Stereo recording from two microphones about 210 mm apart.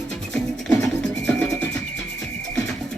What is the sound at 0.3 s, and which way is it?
Music, 5° left (ahead or behind).